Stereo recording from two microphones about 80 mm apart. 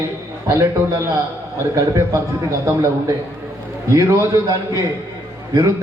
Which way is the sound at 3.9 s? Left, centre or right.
Right.